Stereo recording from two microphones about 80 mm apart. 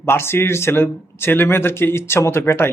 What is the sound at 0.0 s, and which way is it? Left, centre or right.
A man's voice, left.